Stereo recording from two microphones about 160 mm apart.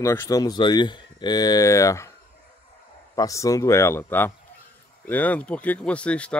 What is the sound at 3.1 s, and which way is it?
Speech, 20° left (ahead or behind).